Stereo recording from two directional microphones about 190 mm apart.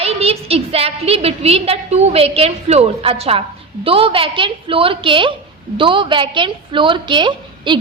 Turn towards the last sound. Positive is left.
turn(degrees=-25)  # may be behind; listen again after turning